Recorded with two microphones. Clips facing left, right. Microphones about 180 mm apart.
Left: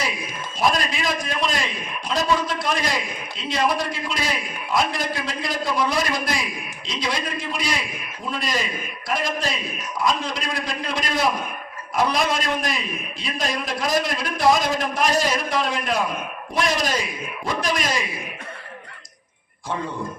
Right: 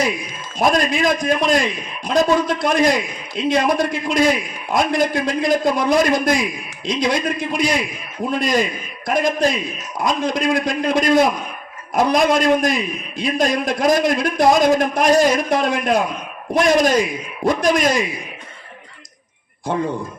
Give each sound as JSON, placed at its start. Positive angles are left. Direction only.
{"t": 0.6, "sound": "a man's voice", "side_deg": -50}
{"t": 19.7, "sound": "a man's voice", "side_deg": -55}